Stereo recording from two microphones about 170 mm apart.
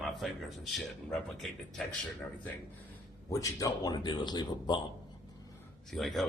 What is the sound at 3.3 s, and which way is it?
Speech, 20° left (ahead or behind).